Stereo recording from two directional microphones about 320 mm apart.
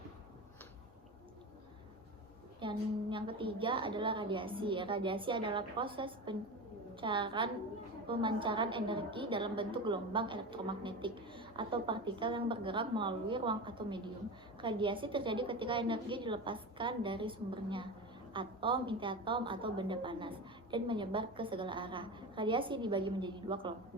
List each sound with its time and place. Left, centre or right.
2.6 s a woman's voice: centre